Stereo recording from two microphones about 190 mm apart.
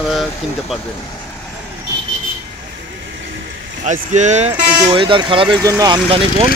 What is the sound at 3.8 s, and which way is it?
Speech, 40° right (ahead or behind).